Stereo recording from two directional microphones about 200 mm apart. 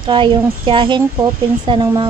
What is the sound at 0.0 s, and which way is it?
A woman's voice, 25° right (ahead or behind).